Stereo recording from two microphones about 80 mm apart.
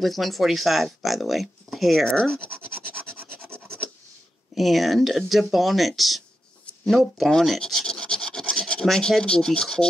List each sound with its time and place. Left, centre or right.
0.0 s speech: centre
3.1 s rub: right
4.6 s speech: centre
6.9 s filing: centre